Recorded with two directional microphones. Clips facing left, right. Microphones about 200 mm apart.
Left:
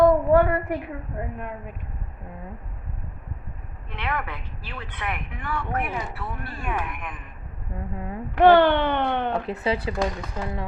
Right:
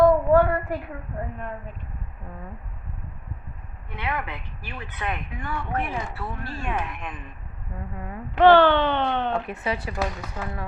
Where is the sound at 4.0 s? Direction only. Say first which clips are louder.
Even; 20° right (ahead or behind).